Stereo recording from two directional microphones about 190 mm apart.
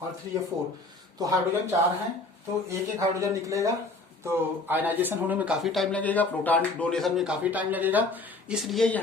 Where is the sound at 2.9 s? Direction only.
15° right (ahead or behind).